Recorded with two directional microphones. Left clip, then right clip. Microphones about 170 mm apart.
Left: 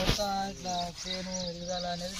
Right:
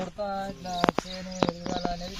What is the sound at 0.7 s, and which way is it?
Speech, 60° right (ahead or behind).